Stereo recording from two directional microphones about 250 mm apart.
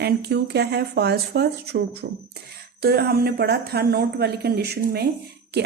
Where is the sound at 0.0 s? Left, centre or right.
Right.